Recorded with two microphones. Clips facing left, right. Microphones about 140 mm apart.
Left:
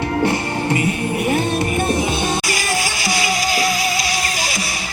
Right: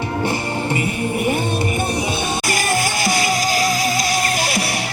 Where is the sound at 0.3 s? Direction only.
20° right (ahead or behind).